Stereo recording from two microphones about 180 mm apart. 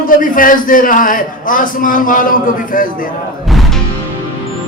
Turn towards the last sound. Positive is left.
turn(degrees=0)  # may be behind; listen again after turning